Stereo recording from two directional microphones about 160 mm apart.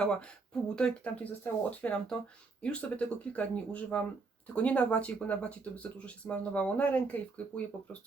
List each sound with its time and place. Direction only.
0.0 s speech: 5° left (ahead or behind)